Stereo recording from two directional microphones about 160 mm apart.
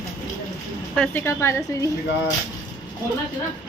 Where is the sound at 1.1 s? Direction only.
15° left (ahead or behind).